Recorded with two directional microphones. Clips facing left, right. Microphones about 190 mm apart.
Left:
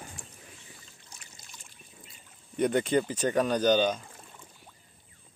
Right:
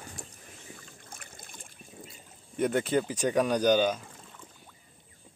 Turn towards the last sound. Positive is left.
turn(degrees=-10)  # may be behind; listen again after turning